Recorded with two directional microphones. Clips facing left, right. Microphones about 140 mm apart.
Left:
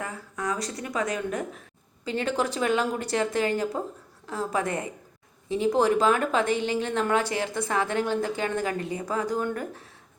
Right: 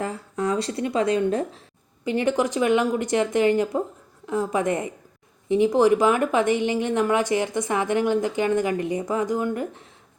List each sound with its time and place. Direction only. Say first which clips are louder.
0.0 s speech: right 6 dB; 25° right (ahead or behind)
2.0 s a woman's voice: right 5 dB; 15° right (ahead or behind)